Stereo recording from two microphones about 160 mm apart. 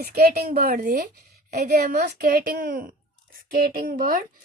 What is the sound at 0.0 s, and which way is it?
A woman's voice, 75° right (ahead or behind).